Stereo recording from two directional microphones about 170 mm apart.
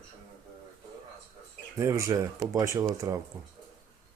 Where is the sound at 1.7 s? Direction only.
15° right (ahead or behind).